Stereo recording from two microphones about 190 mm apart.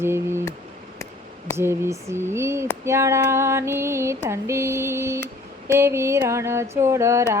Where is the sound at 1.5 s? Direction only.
15° right (ahead or behind).